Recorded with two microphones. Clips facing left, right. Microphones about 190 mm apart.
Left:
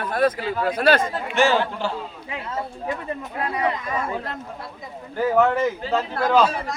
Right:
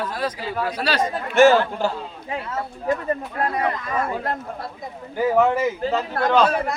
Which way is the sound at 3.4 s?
50° right (ahead or behind).